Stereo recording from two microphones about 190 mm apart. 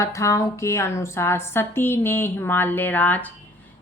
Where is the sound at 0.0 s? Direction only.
15° left (ahead or behind).